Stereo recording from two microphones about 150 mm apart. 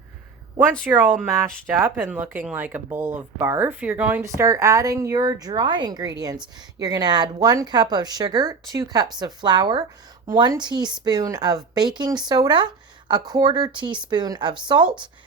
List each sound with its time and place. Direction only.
0.9 s speech: 10° right (ahead or behind); by 14.8 s 30° right (ahead or behind)